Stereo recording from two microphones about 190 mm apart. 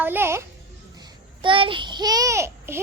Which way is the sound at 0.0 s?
10° right (ahead or behind).